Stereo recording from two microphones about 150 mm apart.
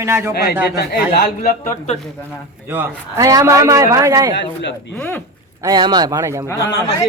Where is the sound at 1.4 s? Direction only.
45° left (ahead or behind).